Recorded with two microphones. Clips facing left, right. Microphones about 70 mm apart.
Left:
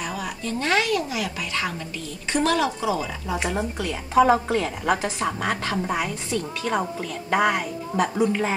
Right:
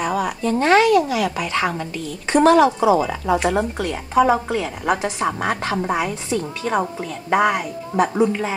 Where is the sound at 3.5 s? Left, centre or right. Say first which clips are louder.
Right 5 dB; right.